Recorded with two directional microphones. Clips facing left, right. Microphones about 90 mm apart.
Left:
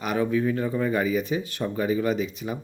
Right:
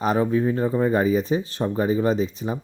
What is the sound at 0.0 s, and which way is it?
Speech, 35° right (ahead or behind).